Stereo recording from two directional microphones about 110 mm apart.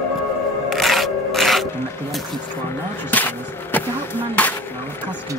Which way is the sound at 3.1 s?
15° left (ahead or behind).